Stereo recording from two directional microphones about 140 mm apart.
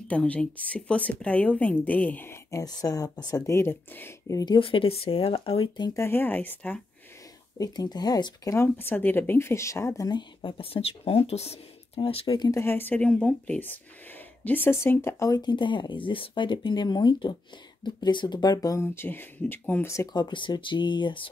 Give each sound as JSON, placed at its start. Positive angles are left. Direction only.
{"t": 0.1, "sound": "a woman's voice", "side_deg": 10}
{"t": 4.6, "sound": "speech", "side_deg": 40}
{"t": 5.9, "sound": "a woman's voice", "side_deg": 15}
{"t": 7.5, "sound": "speech", "side_deg": 25}
{"t": 12.4, "sound": "speech", "side_deg": 20}